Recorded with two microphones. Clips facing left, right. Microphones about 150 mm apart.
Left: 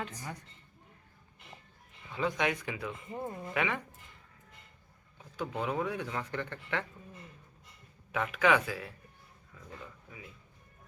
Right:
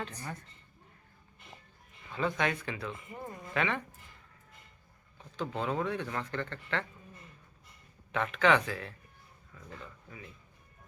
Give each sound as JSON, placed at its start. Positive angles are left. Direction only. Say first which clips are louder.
{"t": 0.2, "sound": "speech", "louder": "right 1 dB", "side_deg": 10}
{"t": 2.1, "sound": "speech", "louder": "even", "side_deg": 15}
{"t": 3.1, "sound": "speech", "louder": "left 4 dB", "side_deg": 25}
{"t": 3.5, "sound": "speech", "louder": "right 1 dB", "side_deg": 10}
{"t": 5.1, "sound": "speech", "louder": "right 1 dB", "side_deg": 10}
{"t": 8.1, "sound": "speech", "louder": "right 1 dB", "side_deg": 10}